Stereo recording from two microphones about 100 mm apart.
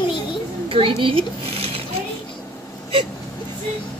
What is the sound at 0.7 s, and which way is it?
A child's voice, 65° right (ahead or behind).